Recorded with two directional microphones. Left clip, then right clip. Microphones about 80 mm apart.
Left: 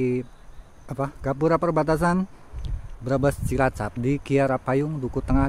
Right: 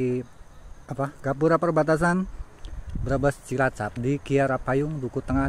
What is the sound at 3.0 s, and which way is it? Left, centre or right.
Speech, left.